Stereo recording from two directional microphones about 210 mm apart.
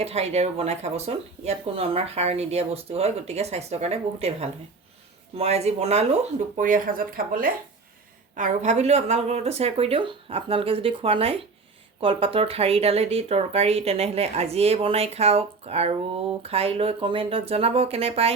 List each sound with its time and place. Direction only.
0.0 s speech: 30° right (ahead or behind)